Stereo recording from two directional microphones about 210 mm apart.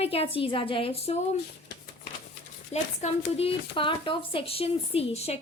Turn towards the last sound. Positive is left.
turn(degrees=30)  # may be behind; listen again after turning